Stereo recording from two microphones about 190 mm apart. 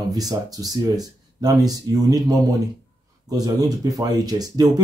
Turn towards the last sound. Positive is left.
turn(degrees=-20)  # may be behind; listen again after turning